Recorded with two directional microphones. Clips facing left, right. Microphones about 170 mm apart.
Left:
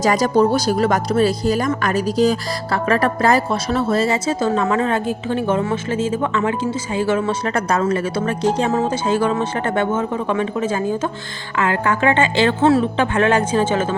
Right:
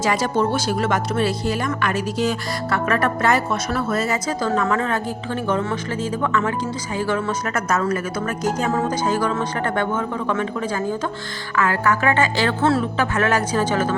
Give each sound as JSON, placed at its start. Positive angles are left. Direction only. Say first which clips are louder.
{"t": 0.0, "sound": "speech", "louder": "left 5 dB", "side_deg": 40}